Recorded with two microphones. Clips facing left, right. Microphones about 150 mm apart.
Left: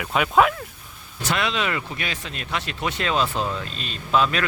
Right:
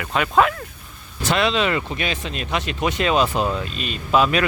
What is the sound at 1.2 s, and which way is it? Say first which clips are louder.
Speech: right 5 dB; 25° right (ahead or behind).